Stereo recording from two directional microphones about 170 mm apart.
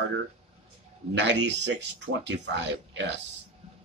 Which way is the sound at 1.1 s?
90° right.